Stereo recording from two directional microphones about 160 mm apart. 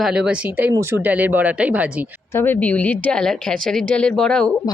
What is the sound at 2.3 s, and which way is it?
A woman's voice, 10° left (ahead or behind).